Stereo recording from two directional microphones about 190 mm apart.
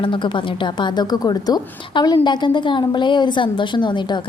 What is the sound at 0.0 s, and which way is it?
A woman's voice, 25° left (ahead or behind).